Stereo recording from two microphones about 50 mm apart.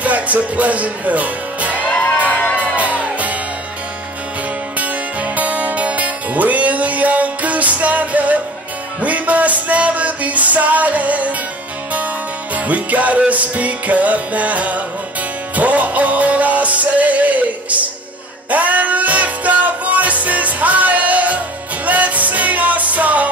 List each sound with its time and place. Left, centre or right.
0.0 s music: right
2.0 s music: left
2.6 s music: right
4.7 s music: right
12.5 s music: right